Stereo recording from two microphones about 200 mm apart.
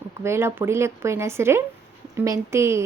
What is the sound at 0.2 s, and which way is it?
A woman's voice, 15° right (ahead or behind).